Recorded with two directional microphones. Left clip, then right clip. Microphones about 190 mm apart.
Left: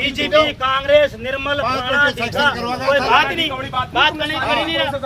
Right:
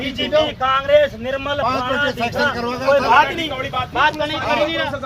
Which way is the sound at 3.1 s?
Centre (ahead or behind).